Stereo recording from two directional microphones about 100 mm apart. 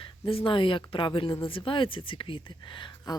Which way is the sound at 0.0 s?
65° left (ahead or behind).